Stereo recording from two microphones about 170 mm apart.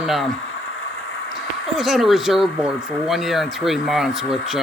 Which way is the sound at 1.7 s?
Centre (ahead or behind).